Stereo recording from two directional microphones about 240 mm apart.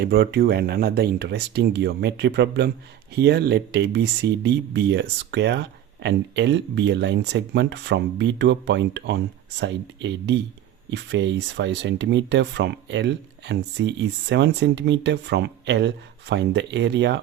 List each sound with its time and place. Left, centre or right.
0.0 s speech: right